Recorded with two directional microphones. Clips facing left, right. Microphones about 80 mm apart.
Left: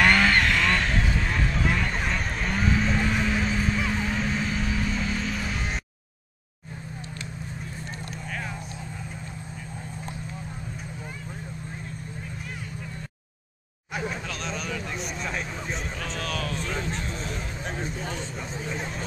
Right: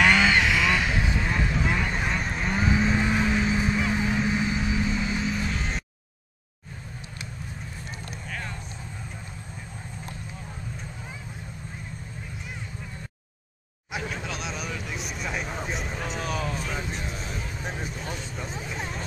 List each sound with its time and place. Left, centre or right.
0.0 s vehicle: centre
2.7 s vehicle: centre
5.5 s music: centre
14.1 s a sound: centre
15.4 s a sound: centre
17.3 s vehicle: centre